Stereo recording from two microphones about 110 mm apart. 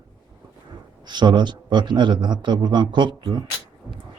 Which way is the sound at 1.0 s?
45° right (ahead or behind).